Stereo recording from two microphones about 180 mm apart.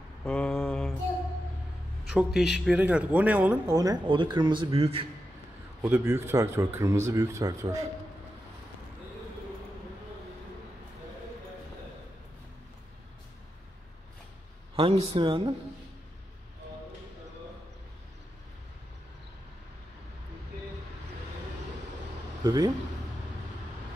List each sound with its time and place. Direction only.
0.2 s mantra: 5° left (ahead or behind)
2.0 s speech: 5° right (ahead or behind)
3.7 s speech: 20° right (ahead or behind)
5.8 s speech: 15° right (ahead or behind)
14.8 s a man's voice: 30° right (ahead or behind)
22.4 s speech: 20° right (ahead or behind)